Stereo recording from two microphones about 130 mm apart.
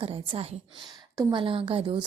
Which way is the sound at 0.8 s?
30° right (ahead or behind).